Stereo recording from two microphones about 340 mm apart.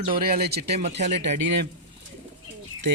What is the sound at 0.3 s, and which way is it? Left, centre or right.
Speech, right.